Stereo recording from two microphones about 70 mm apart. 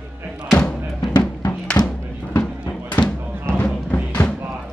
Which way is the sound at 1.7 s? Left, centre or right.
Left.